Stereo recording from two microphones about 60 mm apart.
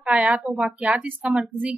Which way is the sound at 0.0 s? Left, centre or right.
Right.